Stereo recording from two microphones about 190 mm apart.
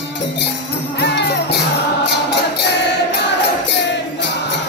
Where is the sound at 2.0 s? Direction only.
60° left (ahead or behind).